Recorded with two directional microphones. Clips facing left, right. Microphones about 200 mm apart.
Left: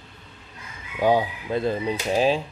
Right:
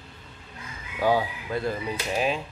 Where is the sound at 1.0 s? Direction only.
20° left (ahead or behind).